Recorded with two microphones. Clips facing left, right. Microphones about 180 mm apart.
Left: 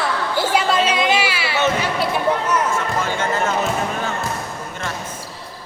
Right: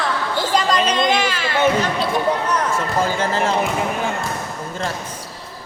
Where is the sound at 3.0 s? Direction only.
30° right (ahead or behind).